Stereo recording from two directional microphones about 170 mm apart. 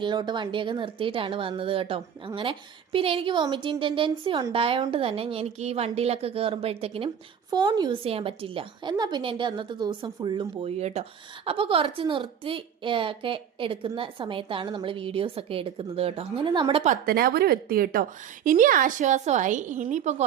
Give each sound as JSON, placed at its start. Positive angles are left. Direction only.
{"t": 0.0, "sound": "a woman's voice", "side_deg": -25}
{"t": 7.5, "sound": "a woman's voice", "side_deg": -25}
{"t": 16.9, "sound": "a woman's voice", "side_deg": -60}